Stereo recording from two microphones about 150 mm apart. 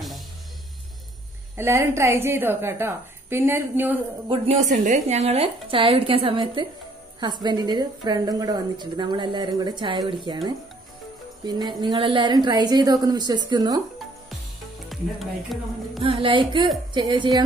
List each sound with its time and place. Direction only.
1.6 s a woman's voice: 15° right (ahead or behind)
4.3 s a woman's voice: 45° right (ahead or behind)
11.4 s a woman's voice: 25° right (ahead or behind)
14.9 s music: centre (ahead or behind)
16.0 s a woman's voice: 35° right (ahead or behind)